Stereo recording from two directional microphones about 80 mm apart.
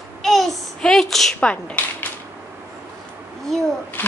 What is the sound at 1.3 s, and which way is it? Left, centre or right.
Speech, centre.